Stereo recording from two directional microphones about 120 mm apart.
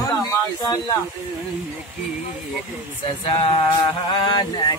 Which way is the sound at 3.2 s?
50° left (ahead or behind).